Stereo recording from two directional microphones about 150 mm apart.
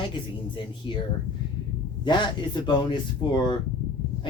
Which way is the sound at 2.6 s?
30° left (ahead or behind).